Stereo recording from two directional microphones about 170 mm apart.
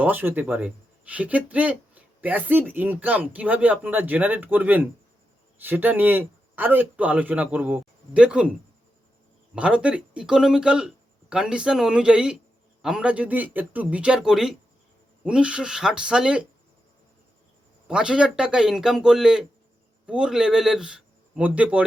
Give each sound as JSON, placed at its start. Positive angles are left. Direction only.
{"t": 0.0, "sound": "speech", "side_deg": -10}
{"t": 9.6, "sound": "speech", "side_deg": -5}
{"t": 17.8, "sound": "speech", "side_deg": -5}